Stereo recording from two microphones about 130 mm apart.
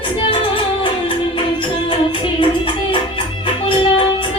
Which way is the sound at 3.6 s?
45° left (ahead or behind).